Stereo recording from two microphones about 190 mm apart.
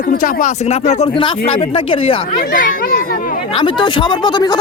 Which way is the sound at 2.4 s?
45° left (ahead or behind).